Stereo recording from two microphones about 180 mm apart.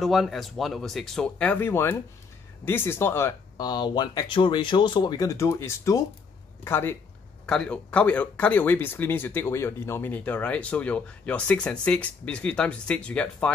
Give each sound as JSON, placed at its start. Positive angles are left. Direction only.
{"t": 0.0, "sound": "speech", "side_deg": 0}